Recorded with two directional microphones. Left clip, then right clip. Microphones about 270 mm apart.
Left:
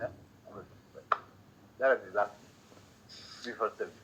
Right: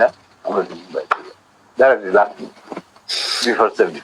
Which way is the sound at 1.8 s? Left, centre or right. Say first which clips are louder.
Right 16 dB; right.